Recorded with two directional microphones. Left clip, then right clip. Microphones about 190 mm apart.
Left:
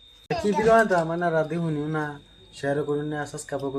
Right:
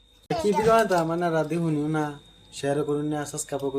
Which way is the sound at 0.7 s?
10° right (ahead or behind).